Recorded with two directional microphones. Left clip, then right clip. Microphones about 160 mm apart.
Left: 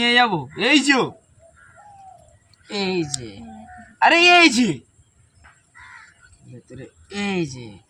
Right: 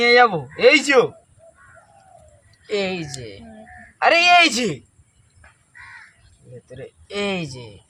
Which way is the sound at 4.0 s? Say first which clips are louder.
Left 1 dB; 25° right (ahead or behind).